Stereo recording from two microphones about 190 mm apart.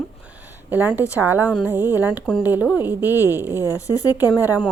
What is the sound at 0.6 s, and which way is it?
A woman's voice, 10° right (ahead or behind).